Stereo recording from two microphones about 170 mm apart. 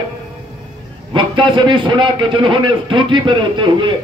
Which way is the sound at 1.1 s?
30° right (ahead or behind).